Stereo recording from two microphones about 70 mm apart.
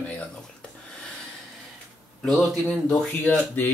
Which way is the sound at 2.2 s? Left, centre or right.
Centre.